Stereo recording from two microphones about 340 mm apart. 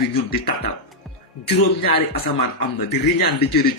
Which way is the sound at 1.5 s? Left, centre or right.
Left.